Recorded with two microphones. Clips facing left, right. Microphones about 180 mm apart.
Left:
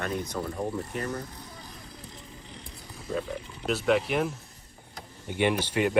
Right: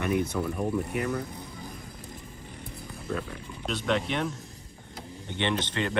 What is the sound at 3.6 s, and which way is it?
Speech, 5° left (ahead or behind).